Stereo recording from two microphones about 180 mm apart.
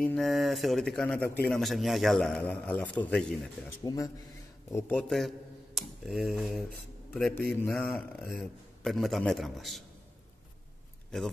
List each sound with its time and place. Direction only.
0.0 s a man's voice: 5° left (ahead or behind)
3.8 s a man's voice: 20° left (ahead or behind); by 6.6 s centre (ahead or behind)
7.5 s a man's voice: 10° left (ahead or behind)